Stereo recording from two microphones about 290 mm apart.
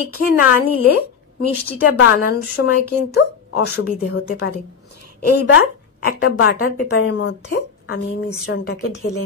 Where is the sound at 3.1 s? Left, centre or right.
Left.